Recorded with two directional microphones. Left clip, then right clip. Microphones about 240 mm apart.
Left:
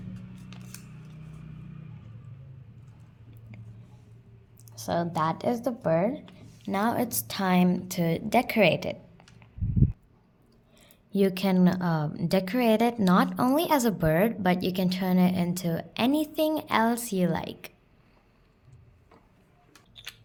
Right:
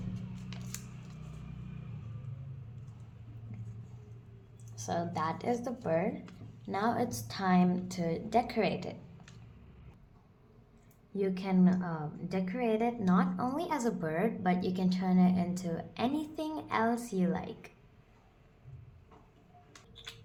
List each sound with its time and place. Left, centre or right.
4.7 s a woman's voice: left
11.1 s a woman's voice: left